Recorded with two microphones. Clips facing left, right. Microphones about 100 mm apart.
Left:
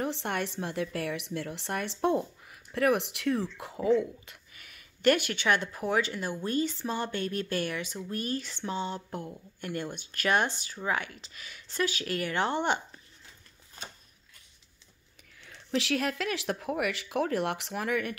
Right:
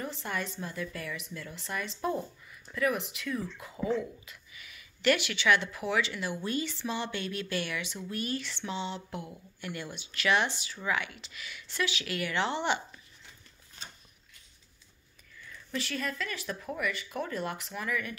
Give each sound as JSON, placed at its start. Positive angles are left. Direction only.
{"t": 0.0, "sound": "speech", "side_deg": 65}
{"t": 4.3, "sound": "speech", "side_deg": 50}
{"t": 15.4, "sound": "speech", "side_deg": 85}